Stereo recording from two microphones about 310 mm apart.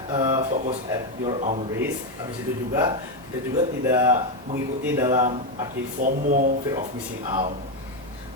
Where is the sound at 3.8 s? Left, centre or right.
Centre.